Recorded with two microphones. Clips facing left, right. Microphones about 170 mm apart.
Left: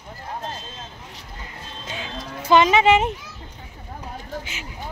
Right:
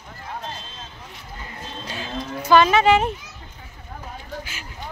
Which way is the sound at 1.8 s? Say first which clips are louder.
Right 2 dB; 20° left (ahead or behind).